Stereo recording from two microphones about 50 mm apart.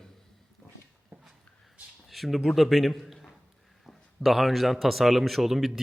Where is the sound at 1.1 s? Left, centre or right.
Right.